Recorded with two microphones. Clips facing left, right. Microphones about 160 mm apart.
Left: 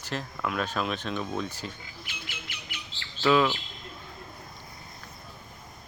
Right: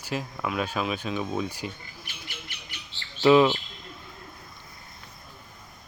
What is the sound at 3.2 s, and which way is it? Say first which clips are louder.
Speech: right 5 dB; 20° right (ahead or behind).